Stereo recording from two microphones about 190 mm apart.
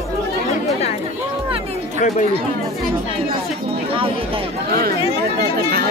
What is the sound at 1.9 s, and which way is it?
Speech, 40° left (ahead or behind).